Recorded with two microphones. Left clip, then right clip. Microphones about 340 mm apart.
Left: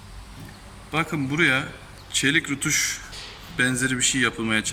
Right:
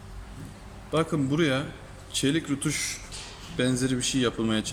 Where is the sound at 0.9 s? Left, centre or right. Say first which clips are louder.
Left 1 dB; centre.